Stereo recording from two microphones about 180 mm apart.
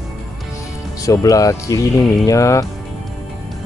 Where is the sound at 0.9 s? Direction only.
20° left (ahead or behind).